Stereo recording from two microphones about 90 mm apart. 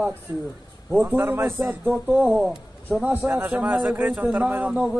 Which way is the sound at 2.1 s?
10° right (ahead or behind).